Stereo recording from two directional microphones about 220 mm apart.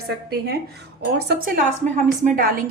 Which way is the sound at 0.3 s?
45° right (ahead or behind).